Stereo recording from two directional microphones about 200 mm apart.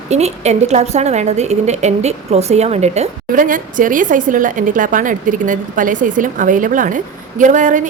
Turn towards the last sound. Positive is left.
turn(degrees=-40)  # may be behind; listen again after turning